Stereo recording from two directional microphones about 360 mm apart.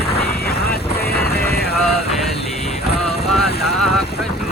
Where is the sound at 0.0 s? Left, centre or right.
Left.